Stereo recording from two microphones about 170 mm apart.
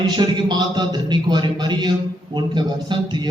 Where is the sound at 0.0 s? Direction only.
25° right (ahead or behind).